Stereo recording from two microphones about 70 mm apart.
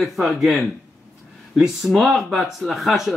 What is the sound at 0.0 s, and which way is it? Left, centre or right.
Speech, centre.